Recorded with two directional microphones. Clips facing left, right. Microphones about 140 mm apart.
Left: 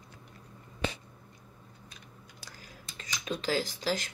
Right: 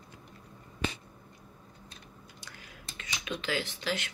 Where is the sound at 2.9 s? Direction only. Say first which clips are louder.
Left 2 dB; 35° left (ahead or behind).